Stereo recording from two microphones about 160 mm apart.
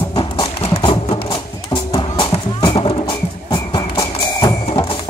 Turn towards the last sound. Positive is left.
turn(degrees=35)  # may be behind; listen again after turning